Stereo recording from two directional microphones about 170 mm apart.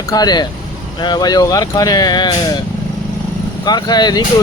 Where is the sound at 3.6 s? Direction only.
25° left (ahead or behind).